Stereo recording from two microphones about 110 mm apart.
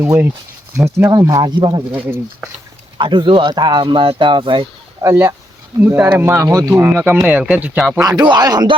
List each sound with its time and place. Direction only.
0.0 s speech: 20° right (ahead or behind); by 1.8 s 40° right (ahead or behind)
1.9 s speech: 15° right (ahead or behind)
3.0 s speech: 45° right (ahead or behind)
5.0 s speech: 20° right (ahead or behind)
8.0 s speech: 40° right (ahead or behind)